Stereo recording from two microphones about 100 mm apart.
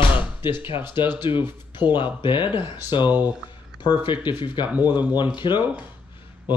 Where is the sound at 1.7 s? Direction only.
50° left (ahead or behind).